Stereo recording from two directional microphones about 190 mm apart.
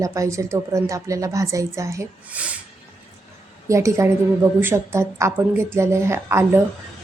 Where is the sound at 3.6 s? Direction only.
15° right (ahead or behind).